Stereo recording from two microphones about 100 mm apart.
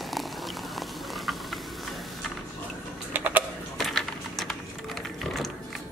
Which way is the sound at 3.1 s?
15° right (ahead or behind).